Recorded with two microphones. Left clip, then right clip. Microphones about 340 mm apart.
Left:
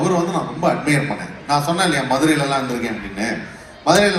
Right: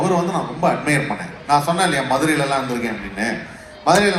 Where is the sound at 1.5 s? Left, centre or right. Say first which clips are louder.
Right 1 dB; right.